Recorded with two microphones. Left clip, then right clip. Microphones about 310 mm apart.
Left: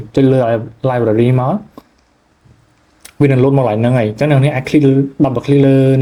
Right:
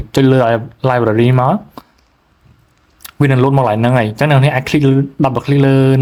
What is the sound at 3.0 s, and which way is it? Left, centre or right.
A man's voice, centre.